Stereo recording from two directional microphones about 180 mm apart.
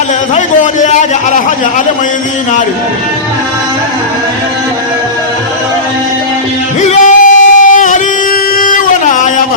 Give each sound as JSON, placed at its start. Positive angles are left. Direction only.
{"t": 0.3, "sound": "a man's voice", "side_deg": 40}
{"t": 6.8, "sound": "singing", "side_deg": 45}
{"t": 8.5, "sound": "a sound", "side_deg": 45}